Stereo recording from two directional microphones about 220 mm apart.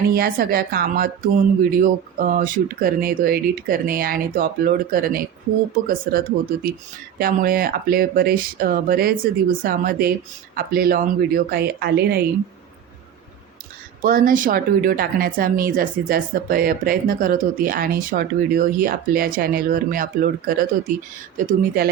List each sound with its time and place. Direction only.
0.1 s speech: 40° right (ahead or behind)
14.0 s speech: 40° right (ahead or behind)